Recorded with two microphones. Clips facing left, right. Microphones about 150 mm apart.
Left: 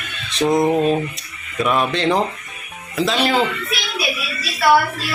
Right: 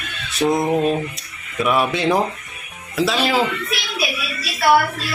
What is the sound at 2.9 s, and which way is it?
Music, centre (ahead or behind).